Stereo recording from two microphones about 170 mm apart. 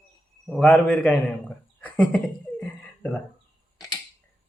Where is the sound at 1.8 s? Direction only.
10° left (ahead or behind).